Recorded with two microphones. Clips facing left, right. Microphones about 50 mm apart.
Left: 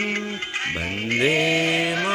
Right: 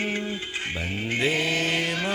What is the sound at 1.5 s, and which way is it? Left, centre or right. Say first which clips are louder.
Chant: left 4 dB; left.